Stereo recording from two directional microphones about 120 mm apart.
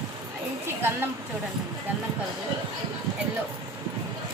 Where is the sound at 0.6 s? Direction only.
20° right (ahead or behind).